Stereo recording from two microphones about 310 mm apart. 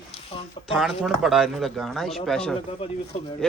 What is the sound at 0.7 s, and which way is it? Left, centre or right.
A man's voice, centre.